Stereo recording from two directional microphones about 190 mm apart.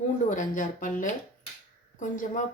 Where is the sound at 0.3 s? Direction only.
40° left (ahead or behind).